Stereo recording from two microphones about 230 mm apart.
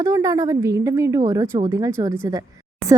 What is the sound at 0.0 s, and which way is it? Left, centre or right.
A woman's voice, centre.